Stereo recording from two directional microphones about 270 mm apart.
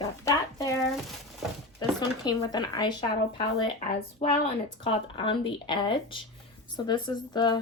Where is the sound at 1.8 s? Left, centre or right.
Centre.